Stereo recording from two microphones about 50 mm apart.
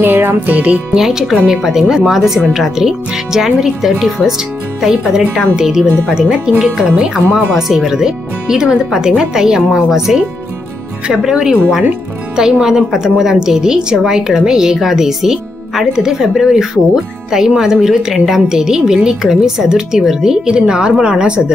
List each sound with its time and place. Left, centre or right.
0.0 s music: right
0.5 s speech: right
0.9 s speech: centre